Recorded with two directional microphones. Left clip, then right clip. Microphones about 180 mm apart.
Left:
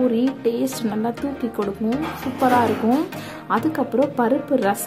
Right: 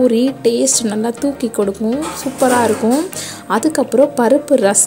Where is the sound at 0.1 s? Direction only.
35° right (ahead or behind).